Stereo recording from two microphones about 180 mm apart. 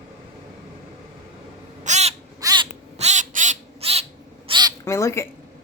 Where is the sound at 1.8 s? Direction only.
40° right (ahead or behind).